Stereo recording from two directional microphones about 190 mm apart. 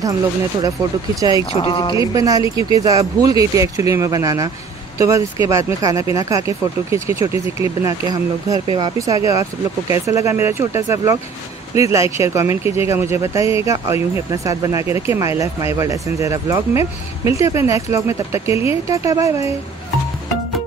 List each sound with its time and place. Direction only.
1.5 s speech: 30° left (ahead or behind)
2.0 s speech: 15° right (ahead or behind)